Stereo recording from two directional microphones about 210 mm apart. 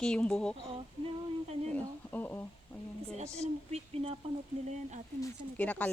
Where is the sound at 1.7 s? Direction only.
10° left (ahead or behind).